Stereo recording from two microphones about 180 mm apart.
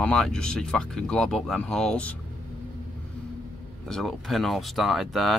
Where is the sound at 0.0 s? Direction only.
5° left (ahead or behind).